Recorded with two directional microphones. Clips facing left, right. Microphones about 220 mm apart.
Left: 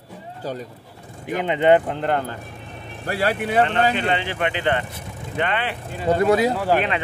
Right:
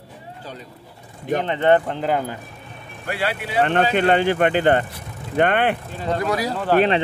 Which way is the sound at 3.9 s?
50° right (ahead or behind).